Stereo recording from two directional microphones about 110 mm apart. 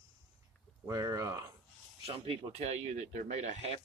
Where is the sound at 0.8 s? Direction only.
30° right (ahead or behind).